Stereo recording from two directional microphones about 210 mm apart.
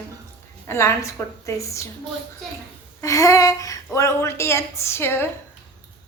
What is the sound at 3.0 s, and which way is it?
Speech, 15° left (ahead or behind).